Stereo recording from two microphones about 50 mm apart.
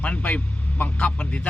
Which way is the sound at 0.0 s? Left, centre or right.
Left.